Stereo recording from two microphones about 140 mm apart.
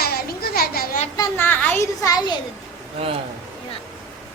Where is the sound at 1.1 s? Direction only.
15° left (ahead or behind).